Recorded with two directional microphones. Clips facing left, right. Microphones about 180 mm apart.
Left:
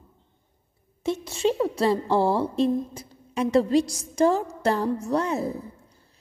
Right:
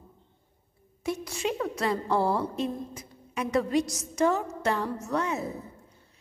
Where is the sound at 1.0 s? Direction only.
25° left (ahead or behind).